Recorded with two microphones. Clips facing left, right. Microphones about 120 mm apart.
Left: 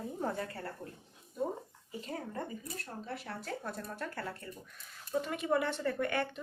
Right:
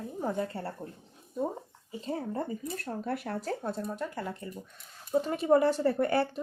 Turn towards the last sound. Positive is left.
turn(degrees=-35)  # may be behind; listen again after turning